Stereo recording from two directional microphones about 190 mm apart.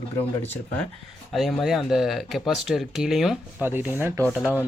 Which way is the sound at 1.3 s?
Centre (ahead or behind).